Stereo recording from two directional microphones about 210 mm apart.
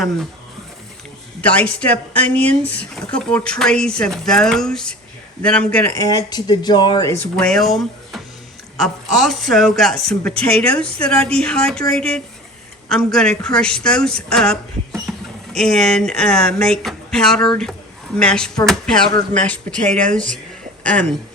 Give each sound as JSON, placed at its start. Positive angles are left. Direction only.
{"t": 1.4, "sound": "speech", "side_deg": 5}
{"t": 6.0, "sound": "speech", "side_deg": 20}
{"t": 7.3, "sound": "speech", "side_deg": 5}
{"t": 20.8, "sound": "speech", "side_deg": 5}